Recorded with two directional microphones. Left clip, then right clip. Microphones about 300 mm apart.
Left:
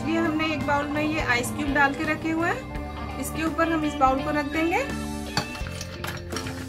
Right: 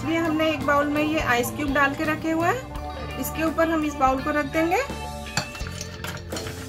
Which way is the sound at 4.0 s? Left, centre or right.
Centre.